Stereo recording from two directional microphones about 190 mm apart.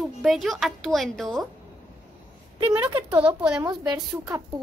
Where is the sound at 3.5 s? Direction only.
20° right (ahead or behind).